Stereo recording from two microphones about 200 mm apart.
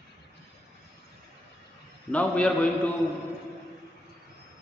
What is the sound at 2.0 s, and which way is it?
Speech, 5° left (ahead or behind).